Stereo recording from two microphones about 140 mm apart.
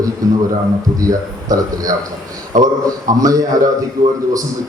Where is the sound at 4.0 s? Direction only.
80° right.